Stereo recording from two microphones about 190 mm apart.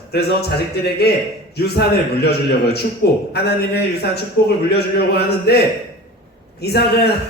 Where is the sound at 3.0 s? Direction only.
60° left (ahead or behind).